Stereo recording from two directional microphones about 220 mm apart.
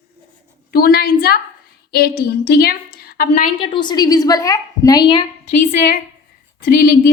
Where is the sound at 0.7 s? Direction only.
45° left (ahead or behind).